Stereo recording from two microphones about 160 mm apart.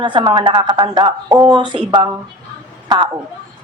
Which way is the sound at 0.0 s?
30° right (ahead or behind).